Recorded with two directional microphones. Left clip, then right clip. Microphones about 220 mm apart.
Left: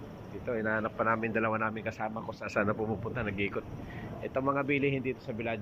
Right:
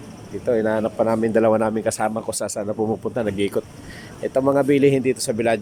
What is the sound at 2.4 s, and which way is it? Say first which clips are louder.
Speech: right 5 dB; 25° right (ahead or behind).